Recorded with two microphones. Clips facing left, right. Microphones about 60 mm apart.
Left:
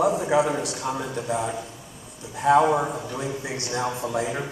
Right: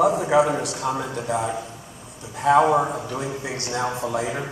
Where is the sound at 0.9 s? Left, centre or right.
Right.